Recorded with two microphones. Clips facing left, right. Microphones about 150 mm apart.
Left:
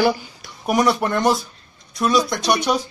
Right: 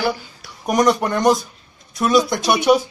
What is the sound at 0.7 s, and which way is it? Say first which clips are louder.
Speech: right 1 dB; centre (ahead or behind).